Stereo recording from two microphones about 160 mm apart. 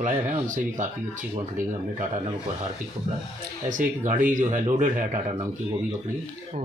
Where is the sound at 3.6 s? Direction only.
50° right (ahead or behind).